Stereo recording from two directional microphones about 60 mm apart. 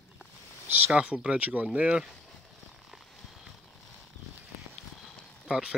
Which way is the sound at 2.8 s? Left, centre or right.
Centre.